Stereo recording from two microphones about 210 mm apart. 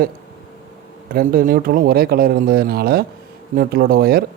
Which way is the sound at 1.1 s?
45° right (ahead or behind).